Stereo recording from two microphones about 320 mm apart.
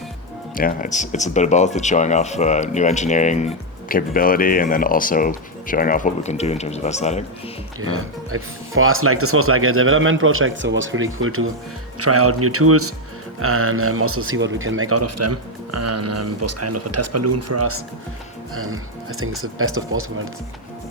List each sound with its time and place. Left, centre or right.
0.5 s speech: left
7.8 s speech: right